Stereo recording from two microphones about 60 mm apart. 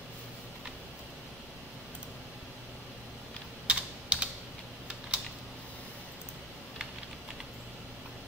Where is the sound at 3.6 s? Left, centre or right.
Right.